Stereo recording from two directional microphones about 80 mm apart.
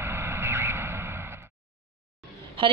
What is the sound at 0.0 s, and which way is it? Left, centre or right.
Vehicle, right.